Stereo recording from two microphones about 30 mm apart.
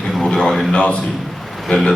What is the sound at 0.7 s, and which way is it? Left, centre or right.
Speech, left.